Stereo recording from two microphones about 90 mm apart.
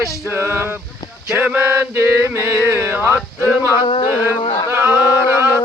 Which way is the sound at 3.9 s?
70° left (ahead or behind).